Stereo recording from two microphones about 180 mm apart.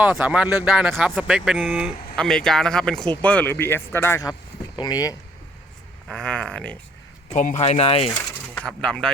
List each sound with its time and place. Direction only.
0.0 s speech: 5° right (ahead or behind); by 5.1 s 20° left (ahead or behind)
6.1 s speech: 5° left (ahead or behind)
7.3 s speech: 40° left (ahead or behind)
8.5 s speech: 5° left (ahead or behind)